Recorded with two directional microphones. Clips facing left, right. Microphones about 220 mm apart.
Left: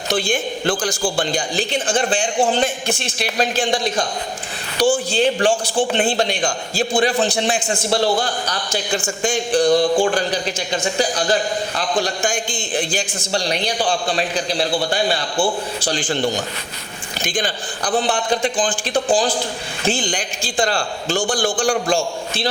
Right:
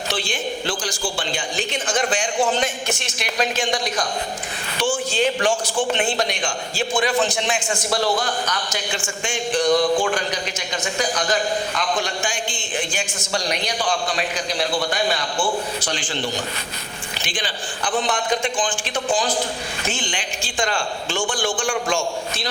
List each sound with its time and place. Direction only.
0.1 s a man's voice: 50° left (ahead or behind)
17.2 s a man's voice: 45° left (ahead or behind)